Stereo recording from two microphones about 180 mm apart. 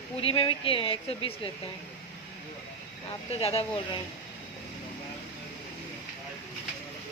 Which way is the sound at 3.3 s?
35° left (ahead or behind).